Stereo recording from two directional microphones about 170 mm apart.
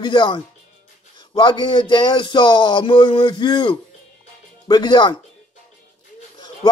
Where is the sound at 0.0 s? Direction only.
30° left (ahead or behind).